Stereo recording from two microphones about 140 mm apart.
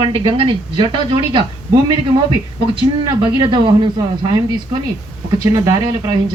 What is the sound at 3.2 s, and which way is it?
Speech, 35° right (ahead or behind).